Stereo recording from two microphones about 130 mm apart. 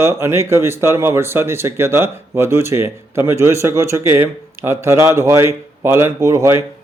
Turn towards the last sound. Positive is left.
turn(degrees=-20)  # may be behind; listen again after turning